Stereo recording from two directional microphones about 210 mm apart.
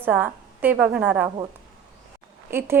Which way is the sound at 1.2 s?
20° right (ahead or behind).